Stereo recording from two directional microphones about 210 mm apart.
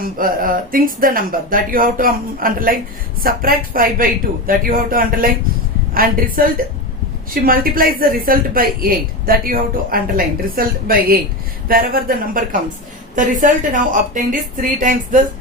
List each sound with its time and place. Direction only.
0.0 s speech: 40° right (ahead or behind)